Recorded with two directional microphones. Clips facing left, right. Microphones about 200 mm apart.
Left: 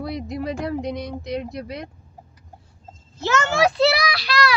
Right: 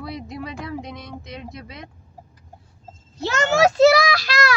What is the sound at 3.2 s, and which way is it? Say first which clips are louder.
A child's voice: right 1 dB; 35° right (ahead or behind).